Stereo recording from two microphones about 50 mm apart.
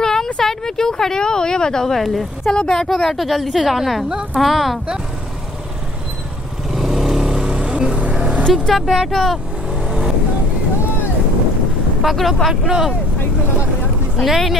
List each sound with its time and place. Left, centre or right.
0.0 s a sound: centre
0.4 s speech: centre
2.5 s speech: centre
2.9 s a woman's voice: centre
4.1 s speech: centre
4.4 s a woman's voice: centre
6.7 s vehicle: centre; by 8.5 s right
8.5 s a woman's voice: centre
8.8 s a woman's voice: centre
9.8 s vehicle: centre
12.0 s a woman's voice: centre
14.1 s a woman's voice: centre